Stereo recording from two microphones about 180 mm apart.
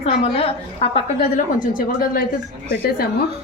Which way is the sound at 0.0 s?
35° left (ahead or behind).